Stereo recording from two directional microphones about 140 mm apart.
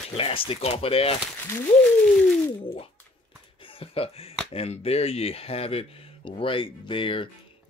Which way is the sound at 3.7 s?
45° left (ahead or behind).